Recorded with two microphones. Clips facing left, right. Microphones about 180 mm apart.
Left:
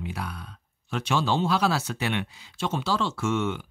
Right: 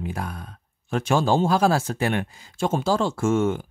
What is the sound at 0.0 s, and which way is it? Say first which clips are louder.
Speech: right 4 dB; 45° right (ahead or behind).